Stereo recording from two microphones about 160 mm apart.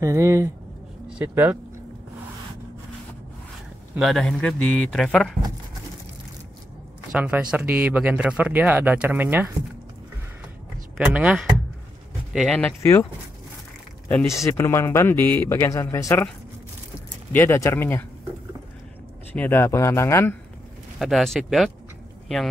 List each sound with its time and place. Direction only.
0.0 s speech: 20° right (ahead or behind)
4.0 s a man's voice: centre (ahead or behind)
7.1 s speech: 10° right (ahead or behind)
11.1 s speech: 5° right (ahead or behind); by 13.0 s 10° left (ahead or behind)
14.0 s speech: 10° left (ahead or behind)
17.3 s speech: 15° left (ahead or behind)
19.3 s speech: 15° left (ahead or behind)
21.0 s a man's voice: centre (ahead or behind)